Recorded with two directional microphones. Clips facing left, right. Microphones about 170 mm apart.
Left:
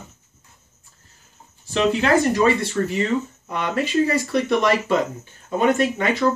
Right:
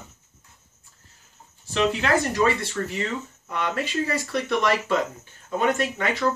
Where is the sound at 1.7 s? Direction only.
30° left (ahead or behind).